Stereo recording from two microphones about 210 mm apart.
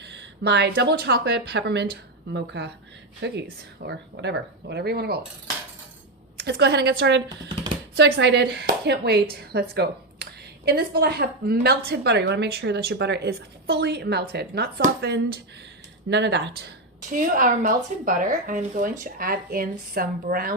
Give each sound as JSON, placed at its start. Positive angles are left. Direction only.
{"t": 0.1, "sound": "a woman's voice", "side_deg": -55}
{"t": 6.4, "sound": "a woman's voice", "side_deg": -55}
{"t": 16.0, "sound": "a woman's voice", "side_deg": -55}